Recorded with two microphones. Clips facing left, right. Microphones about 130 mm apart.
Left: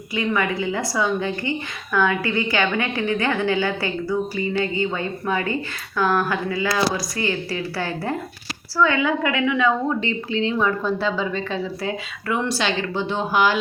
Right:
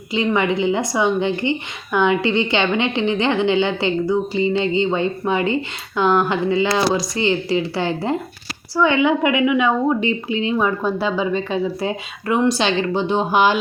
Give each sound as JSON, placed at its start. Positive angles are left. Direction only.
{"t": 0.1, "sound": "a woman's voice", "side_deg": -25}